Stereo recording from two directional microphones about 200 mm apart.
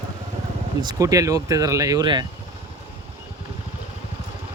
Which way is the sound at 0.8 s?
20° right (ahead or behind).